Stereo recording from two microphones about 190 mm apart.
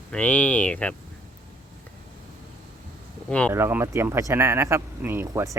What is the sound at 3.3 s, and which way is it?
Speech, 5° left (ahead or behind).